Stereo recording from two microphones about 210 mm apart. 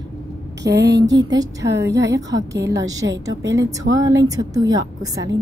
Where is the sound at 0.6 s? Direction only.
55° right (ahead or behind).